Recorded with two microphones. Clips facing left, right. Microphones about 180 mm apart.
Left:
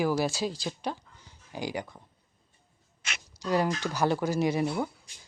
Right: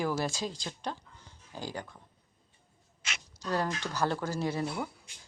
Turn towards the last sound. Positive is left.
turn(degrees=15)  # may be behind; listen again after turning